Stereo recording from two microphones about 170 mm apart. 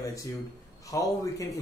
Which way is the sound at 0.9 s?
20° left (ahead or behind).